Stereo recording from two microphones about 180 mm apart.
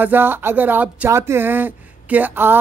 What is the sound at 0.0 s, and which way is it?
Speech, 10° right (ahead or behind).